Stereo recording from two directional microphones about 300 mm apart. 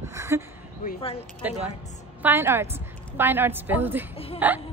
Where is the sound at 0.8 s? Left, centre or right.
Centre.